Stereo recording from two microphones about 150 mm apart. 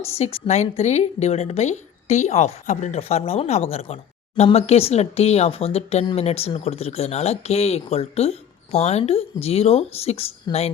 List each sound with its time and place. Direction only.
0.2 s speech: 45° left (ahead or behind)